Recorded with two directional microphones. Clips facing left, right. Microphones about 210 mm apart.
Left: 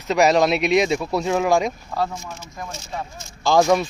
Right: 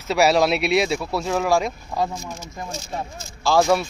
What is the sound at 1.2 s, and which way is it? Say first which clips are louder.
Speech: left 1 dB; centre (ahead or behind).